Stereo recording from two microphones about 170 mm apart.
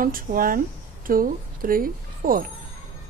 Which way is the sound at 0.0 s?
55° right (ahead or behind).